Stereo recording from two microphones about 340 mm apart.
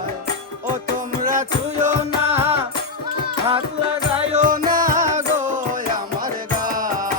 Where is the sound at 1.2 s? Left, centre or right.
Right.